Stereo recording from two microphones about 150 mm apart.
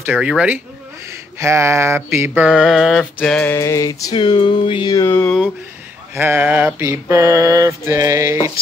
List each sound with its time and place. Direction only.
0.0 s mantra: 10° right (ahead or behind)
1.4 s mantra: 20° right (ahead or behind)
2.5 s mantra: centre (ahead or behind)
3.2 s music: 10° left (ahead or behind)
3.5 s music: 20° left (ahead or behind)
5.0 s music: 15° left (ahead or behind)
6.1 s mantra: 15° right (ahead or behind)